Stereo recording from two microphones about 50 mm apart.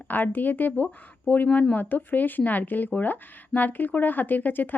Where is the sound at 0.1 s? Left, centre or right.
Left.